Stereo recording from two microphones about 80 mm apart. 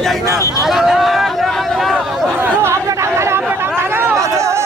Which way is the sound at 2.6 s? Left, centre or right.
Right.